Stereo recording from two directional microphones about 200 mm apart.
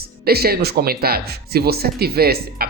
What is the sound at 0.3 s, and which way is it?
Speech, 50° right (ahead or behind).